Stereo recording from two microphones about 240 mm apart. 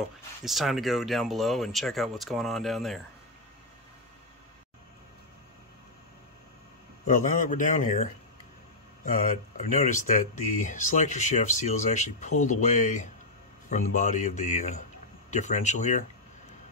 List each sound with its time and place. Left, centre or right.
0.5 s speech: centre
7.1 s speech: left